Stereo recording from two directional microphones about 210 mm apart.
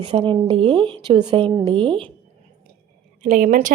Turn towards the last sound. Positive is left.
turn(degrees=-40)  # may be behind; listen again after turning